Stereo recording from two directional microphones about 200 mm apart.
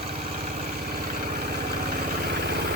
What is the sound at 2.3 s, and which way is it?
Vehicle, 55° right (ahead or behind).